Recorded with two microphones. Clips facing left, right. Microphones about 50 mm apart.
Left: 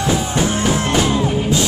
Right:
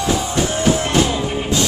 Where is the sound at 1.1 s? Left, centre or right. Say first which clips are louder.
Left 4 dB; centre.